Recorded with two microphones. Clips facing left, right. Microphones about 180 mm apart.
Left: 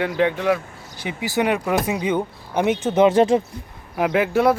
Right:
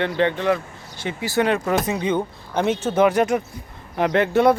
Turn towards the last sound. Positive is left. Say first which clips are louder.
# right 1 dB
turn(degrees=5)  # may be behind; listen again after turning